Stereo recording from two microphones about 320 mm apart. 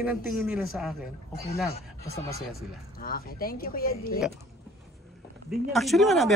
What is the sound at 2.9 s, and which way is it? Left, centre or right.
Speech, left.